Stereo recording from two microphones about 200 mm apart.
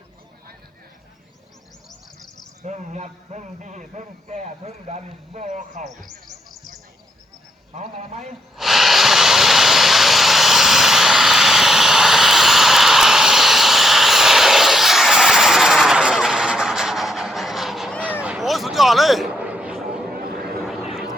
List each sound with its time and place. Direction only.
2.6 s a man's voice: 35° right (ahead or behind)
5.8 s speech: centre (ahead or behind)
7.7 s a man's voice: 35° right (ahead or behind)
8.5 s vehicle: centre (ahead or behind)
20.1 s a sound: 50° right (ahead or behind)
20.6 s a sound: centre (ahead or behind)
20.9 s vehicle: centre (ahead or behind)